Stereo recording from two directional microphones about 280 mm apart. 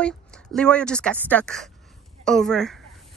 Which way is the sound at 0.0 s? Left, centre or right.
Centre.